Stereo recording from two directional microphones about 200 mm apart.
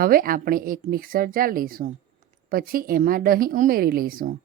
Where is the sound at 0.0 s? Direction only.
45° right (ahead or behind).